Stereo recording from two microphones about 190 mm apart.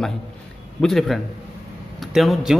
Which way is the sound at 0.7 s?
Centre (ahead or behind).